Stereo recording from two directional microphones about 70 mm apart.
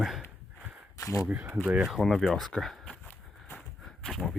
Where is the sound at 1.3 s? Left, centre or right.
Right.